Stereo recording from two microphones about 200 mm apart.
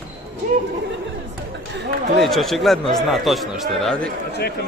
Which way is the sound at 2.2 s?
Centre (ahead or behind).